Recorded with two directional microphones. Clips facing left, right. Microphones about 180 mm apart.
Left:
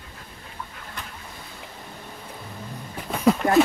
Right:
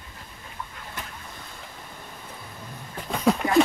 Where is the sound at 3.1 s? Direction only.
5° left (ahead or behind).